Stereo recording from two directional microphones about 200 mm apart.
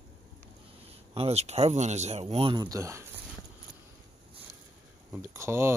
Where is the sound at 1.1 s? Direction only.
30° right (ahead or behind).